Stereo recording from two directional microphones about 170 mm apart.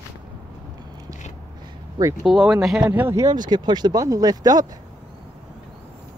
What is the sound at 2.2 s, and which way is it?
Speech, 5° right (ahead or behind).